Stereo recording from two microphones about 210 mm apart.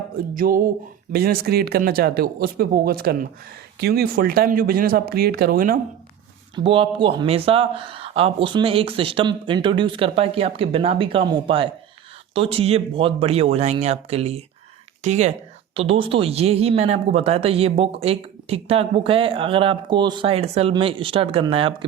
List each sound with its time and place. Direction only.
0.3 s speech: 40° right (ahead or behind)
6.6 s speech: 25° right (ahead or behind)